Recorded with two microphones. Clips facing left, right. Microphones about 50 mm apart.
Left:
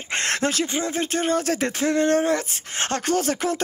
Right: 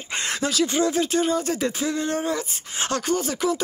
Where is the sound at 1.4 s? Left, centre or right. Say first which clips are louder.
Left 2 dB; left.